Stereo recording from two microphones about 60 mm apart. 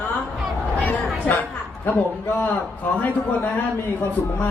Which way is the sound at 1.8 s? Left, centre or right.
Left.